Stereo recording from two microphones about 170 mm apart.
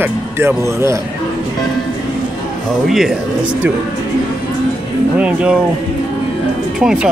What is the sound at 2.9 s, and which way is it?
Speech, centre (ahead or behind).